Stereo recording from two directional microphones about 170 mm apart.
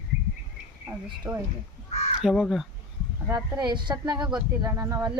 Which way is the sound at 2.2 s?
5° right (ahead or behind).